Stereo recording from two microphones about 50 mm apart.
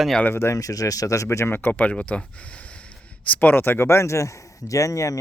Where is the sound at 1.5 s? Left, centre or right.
Left.